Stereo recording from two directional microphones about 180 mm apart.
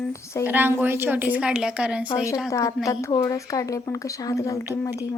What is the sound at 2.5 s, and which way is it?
Speech, 20° left (ahead or behind).